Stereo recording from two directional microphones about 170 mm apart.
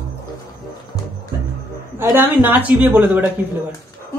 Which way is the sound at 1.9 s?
10° right (ahead or behind).